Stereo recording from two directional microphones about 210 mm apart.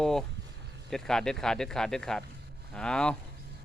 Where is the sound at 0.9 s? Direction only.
Centre (ahead or behind).